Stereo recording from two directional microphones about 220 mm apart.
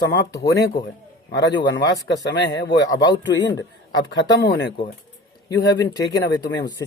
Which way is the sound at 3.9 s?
55° left (ahead or behind).